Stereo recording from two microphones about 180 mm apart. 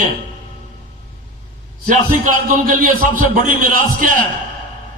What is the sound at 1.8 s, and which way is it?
A man's voice, 50° right (ahead or behind).